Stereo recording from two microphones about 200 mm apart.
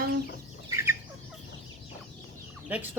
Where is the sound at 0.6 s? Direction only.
15° right (ahead or behind).